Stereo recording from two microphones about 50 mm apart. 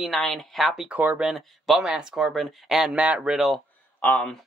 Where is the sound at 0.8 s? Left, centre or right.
Right.